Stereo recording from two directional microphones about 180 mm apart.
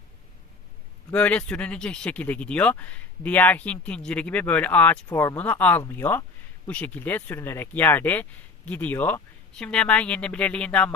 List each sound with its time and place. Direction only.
1.1 s speech: 5° left (ahead or behind)